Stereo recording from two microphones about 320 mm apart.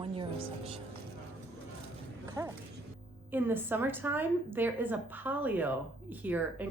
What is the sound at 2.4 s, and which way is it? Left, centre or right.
A woman's voice, centre.